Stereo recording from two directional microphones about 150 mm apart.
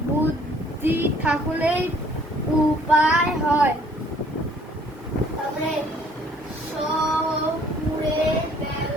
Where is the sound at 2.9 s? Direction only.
5° right (ahead or behind).